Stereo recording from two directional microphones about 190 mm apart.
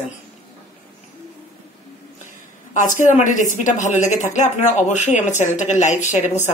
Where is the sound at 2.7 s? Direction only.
40° left (ahead or behind).